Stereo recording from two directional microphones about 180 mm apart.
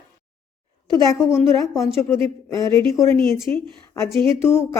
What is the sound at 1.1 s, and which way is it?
Speech, 15° left (ahead or behind).